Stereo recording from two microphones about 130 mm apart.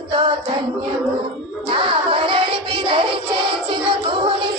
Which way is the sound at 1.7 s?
35° right (ahead or behind).